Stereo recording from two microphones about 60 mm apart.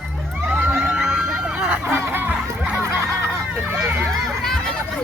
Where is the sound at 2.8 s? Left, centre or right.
Right.